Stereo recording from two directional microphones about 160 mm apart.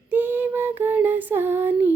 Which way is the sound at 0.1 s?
10° right (ahead or behind).